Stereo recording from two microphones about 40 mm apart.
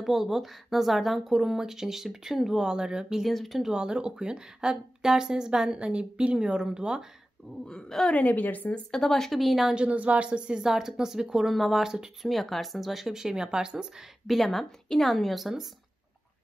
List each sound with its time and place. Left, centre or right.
0.0 s speech: centre
3.3 s a woman's voice: centre
3.7 s a woman's voice: right
7.6 s speech: centre
8.1 s a woman's voice: left
8.9 s speech: centre
9.4 s a woman's voice: centre
9.8 s speech: right
10.6 s speech: centre
11.5 s a woman's voice: centre
11.8 s speech: centre
12.3 s speech: centre; by 14.0 s right
14.2 s a woman's voice: centre